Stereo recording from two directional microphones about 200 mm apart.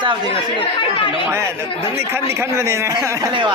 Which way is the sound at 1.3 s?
10° right (ahead or behind).